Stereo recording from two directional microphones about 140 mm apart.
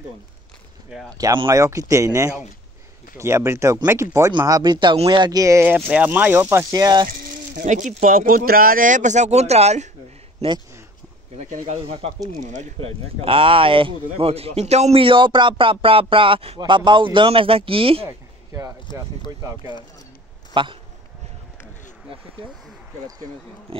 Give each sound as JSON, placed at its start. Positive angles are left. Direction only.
{"t": 1.1, "sound": "speech", "side_deg": -30}
{"t": 7.5, "sound": "speech", "side_deg": -60}
{"t": 11.3, "sound": "speech", "side_deg": -55}
{"t": 12.8, "sound": "speech", "side_deg": -40}
{"t": 18.9, "sound": "speech", "side_deg": 35}
{"t": 20.5, "sound": "speech", "side_deg": -35}
{"t": 23.7, "sound": "speech", "side_deg": -40}